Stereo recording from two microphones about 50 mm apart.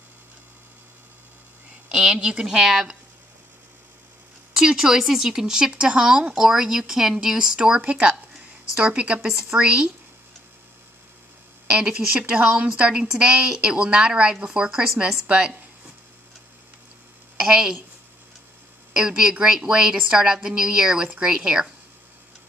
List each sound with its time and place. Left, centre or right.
1.9 s a woman's voice: centre
2.4 s speech: centre
4.6 s speech: centre
7.8 s speech: right
11.7 s a woman's voice: centre
15.2 s a woman's voice: right
17.4 s a woman's voice: centre
18.9 s speech: centre